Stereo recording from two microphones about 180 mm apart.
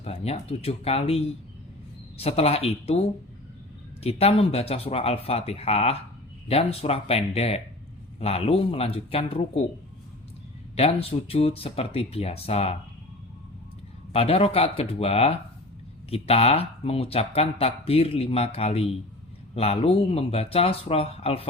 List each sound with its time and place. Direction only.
0.0 s speech: 35° left (ahead or behind)
10.8 s speech: 30° left (ahead or behind)
14.1 s speech: 35° left (ahead or behind)